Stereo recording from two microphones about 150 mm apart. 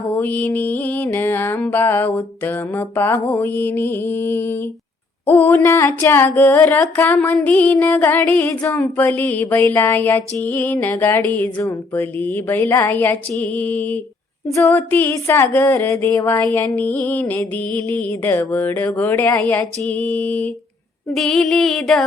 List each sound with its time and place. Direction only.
0.2 s music: 10° left (ahead or behind)
21.1 s female singing: centre (ahead or behind)